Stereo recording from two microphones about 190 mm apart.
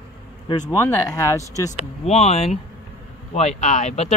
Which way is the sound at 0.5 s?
15° left (ahead or behind).